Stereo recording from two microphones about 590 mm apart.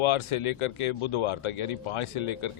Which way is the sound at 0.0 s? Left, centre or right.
Left.